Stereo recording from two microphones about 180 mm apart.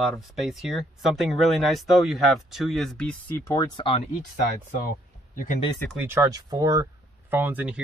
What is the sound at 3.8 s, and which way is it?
Speech, 30° left (ahead or behind).